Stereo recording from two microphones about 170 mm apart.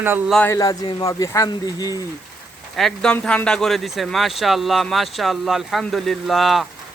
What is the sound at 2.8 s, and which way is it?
A man's voice, centre (ahead or behind).